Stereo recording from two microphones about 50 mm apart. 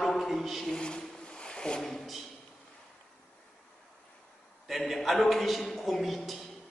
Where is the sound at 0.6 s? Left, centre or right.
Centre.